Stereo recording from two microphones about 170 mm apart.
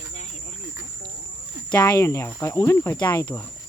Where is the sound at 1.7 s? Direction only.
25° left (ahead or behind).